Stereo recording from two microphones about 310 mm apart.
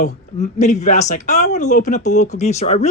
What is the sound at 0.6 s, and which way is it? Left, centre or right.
Speech, left.